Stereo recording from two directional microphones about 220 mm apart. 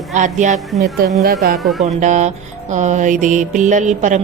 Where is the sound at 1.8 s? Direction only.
35° right (ahead or behind).